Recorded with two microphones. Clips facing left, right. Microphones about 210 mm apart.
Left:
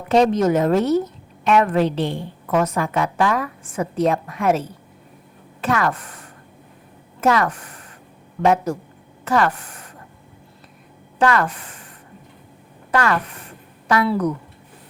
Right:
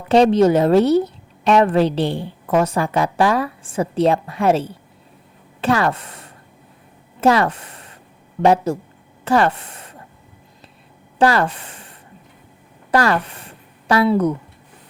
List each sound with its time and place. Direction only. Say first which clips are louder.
0.1 s a woman's voice: right 3 dB; 30° right (ahead or behind)
11.2 s a woman's voice: right 2 dB; 30° right (ahead or behind)
12.9 s a sound: right 3 dB; 35° right (ahead or behind)
14.1 s speech: right 4 dB; 25° right (ahead or behind)